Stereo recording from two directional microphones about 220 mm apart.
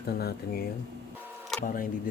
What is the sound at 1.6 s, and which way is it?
Speech, 40° left (ahead or behind).